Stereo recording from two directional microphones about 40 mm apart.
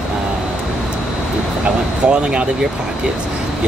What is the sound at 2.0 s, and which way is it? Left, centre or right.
Speech, right.